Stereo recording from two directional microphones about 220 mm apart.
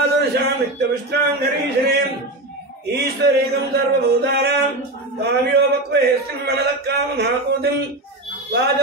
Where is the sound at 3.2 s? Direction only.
50° right (ahead or behind).